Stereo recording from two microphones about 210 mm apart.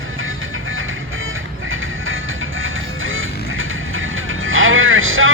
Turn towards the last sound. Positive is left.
turn(degrees=-70)  # may be behind; listen again after turning